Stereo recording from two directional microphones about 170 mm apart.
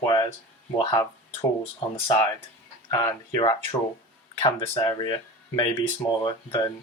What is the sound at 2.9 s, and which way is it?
Speech, 25° left (ahead or behind).